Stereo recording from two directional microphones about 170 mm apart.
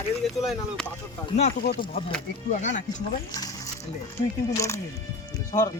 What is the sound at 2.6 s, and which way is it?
Speech, 45° left (ahead or behind).